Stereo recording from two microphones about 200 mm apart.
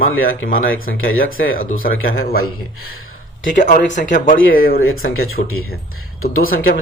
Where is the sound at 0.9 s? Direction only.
90° left.